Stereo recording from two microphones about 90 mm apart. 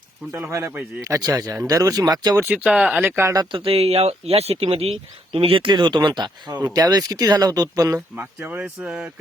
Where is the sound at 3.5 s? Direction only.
90° right; by 8.0 s 40° right (ahead or behind).